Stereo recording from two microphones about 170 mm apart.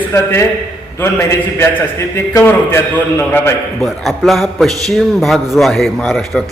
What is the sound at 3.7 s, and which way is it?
A man's voice, centre (ahead or behind).